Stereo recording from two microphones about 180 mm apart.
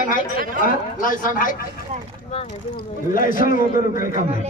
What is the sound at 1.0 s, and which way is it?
Speech, 50° left (ahead or behind).